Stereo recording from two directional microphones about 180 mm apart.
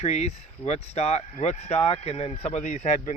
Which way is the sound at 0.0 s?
35° left (ahead or behind).